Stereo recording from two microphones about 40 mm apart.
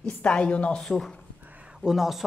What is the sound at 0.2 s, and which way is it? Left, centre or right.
Speech, left.